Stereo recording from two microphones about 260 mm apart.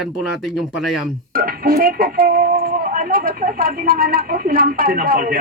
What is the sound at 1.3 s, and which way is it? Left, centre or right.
Speech, right.